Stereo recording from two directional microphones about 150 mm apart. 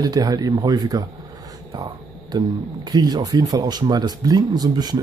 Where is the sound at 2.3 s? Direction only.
30° right (ahead or behind).